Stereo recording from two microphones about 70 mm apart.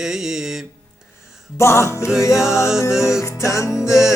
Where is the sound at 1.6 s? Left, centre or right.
Left.